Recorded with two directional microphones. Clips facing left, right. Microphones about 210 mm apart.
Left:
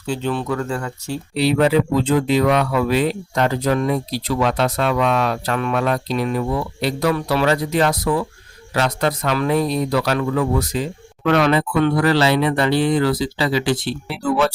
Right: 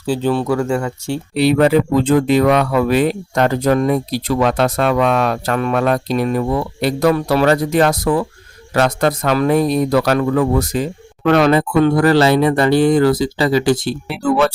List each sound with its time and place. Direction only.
0.0 s speech: 35° right (ahead or behind)
1.4 s speech: 55° right (ahead or behind)
14.1 s speech: 60° right (ahead or behind)